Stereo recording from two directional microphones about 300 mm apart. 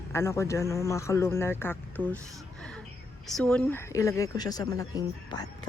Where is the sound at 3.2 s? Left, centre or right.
Centre.